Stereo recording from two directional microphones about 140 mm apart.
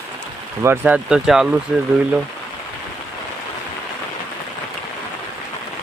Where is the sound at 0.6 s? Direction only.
15° right (ahead or behind).